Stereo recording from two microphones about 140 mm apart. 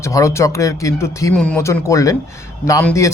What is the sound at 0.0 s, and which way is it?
Speech, 20° left (ahead or behind).